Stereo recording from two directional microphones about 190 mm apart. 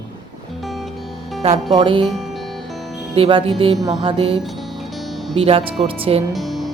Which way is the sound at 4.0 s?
30° right (ahead or behind).